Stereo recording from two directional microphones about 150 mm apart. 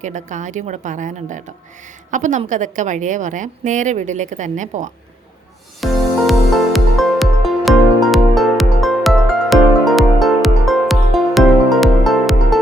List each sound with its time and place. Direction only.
0.0 s a woman's voice: 55° right (ahead or behind)
5.8 s music: centre (ahead or behind)